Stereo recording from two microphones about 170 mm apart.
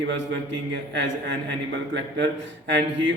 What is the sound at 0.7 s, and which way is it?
Speech, 90° right.